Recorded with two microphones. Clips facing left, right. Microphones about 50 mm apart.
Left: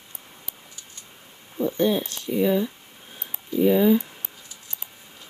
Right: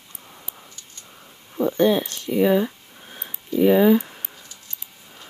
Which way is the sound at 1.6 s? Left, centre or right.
Right.